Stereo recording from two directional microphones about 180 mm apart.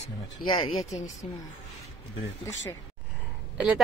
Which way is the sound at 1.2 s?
35° left (ahead or behind).